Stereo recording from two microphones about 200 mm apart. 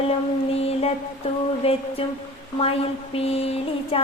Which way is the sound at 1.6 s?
30° left (ahead or behind).